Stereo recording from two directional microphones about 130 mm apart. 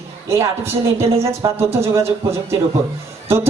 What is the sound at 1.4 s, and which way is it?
A woman's voice, 30° right (ahead or behind).